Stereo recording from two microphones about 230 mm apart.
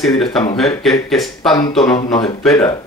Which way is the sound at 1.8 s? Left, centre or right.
Centre.